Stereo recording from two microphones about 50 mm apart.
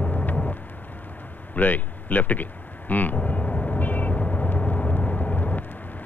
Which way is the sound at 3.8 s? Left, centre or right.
Left.